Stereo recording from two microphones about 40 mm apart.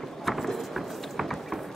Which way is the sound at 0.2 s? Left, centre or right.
Centre.